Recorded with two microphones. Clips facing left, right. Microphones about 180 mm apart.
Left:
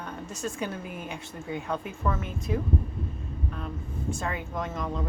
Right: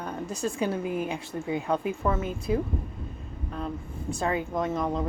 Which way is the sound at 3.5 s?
35° right (ahead or behind).